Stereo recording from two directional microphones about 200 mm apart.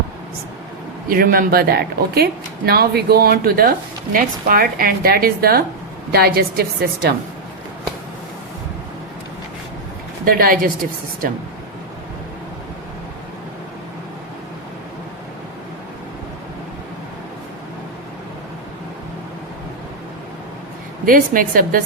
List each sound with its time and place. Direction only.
1.0 s a woman's voice: 45° right (ahead or behind)
10.2 s a woman's voice: 45° right (ahead or behind)
21.0 s a woman's voice: 45° right (ahead or behind)